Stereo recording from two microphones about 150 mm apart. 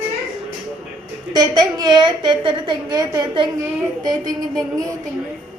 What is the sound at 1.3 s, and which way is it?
A woman's voice, 30° right (ahead or behind).